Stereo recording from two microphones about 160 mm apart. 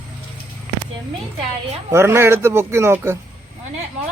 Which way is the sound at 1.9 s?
15° right (ahead or behind).